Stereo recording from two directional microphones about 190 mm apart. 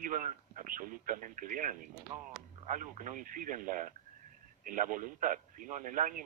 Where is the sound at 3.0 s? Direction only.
45° right (ahead or behind).